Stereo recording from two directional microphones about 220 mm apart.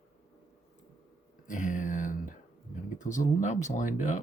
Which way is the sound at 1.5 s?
35° left (ahead or behind).